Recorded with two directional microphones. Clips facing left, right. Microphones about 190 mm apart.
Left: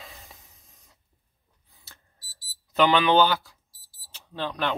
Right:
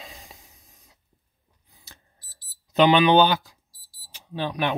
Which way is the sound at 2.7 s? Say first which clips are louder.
Right 3 dB; 20° right (ahead or behind).